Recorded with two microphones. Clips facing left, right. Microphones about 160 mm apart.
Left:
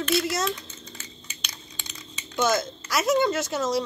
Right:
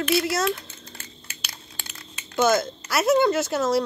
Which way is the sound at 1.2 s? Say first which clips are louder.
Even; 5° right (ahead or behind).